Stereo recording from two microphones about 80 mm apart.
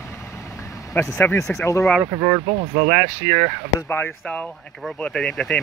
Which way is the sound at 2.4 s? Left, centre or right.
Right.